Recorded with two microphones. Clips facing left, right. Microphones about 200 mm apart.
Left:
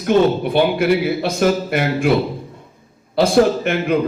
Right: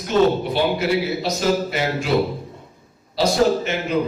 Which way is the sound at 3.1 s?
55° left (ahead or behind).